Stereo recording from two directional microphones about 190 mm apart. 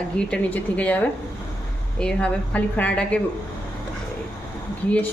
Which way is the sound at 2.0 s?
5° left (ahead or behind).